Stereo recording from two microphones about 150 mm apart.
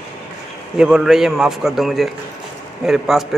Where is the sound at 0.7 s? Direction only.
5° right (ahead or behind).